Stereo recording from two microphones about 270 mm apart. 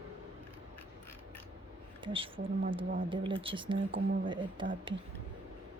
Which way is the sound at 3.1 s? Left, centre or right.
Centre.